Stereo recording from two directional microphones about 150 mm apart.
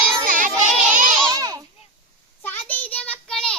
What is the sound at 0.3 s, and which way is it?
Child singing, 60° right (ahead or behind).